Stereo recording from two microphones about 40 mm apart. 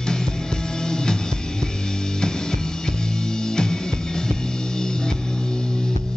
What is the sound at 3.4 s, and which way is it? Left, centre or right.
Music, centre.